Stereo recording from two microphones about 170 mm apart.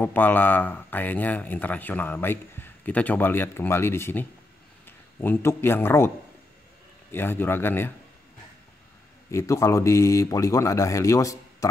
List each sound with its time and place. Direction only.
0.0 s speech: 10° left (ahead or behind)
9.3 s speech: 20° left (ahead or behind)